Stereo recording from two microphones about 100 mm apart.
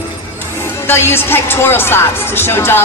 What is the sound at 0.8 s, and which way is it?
A woman's voice, 25° left (ahead or behind).